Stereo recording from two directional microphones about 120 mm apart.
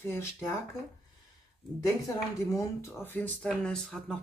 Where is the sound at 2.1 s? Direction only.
25° left (ahead or behind).